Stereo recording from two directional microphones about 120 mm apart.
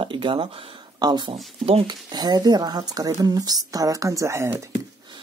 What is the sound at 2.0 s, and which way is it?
A woman's voice, 35° right (ahead or behind).